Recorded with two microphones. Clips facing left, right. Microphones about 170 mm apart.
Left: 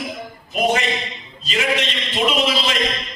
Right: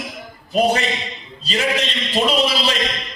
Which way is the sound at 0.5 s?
35° right (ahead or behind).